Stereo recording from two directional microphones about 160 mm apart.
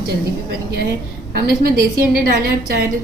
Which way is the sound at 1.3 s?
70° right (ahead or behind).